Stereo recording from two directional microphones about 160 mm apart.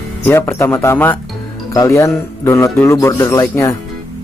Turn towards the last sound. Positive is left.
turn(degrees=20)  # may be behind; listen again after turning